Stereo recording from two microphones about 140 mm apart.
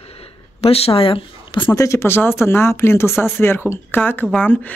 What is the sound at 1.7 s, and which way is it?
Speech, 20° left (ahead or behind).